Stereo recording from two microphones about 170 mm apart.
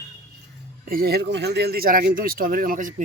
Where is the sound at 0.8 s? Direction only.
60° right (ahead or behind).